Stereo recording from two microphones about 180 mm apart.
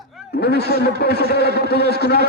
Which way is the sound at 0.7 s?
60° right (ahead or behind).